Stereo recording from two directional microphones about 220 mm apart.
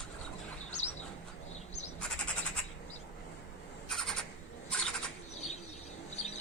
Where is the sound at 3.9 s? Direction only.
Centre (ahead or behind).